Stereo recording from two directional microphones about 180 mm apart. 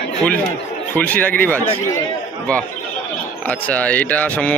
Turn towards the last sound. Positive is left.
turn(degrees=10)  # may be behind; listen again after turning